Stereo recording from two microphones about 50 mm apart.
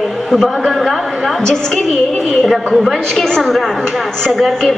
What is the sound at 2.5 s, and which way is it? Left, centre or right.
Speech, centre.